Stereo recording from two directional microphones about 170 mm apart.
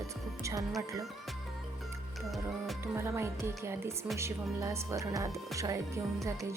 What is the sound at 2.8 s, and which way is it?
Speech, 15° right (ahead or behind).